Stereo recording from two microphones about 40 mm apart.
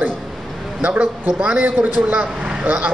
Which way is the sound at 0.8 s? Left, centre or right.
Right.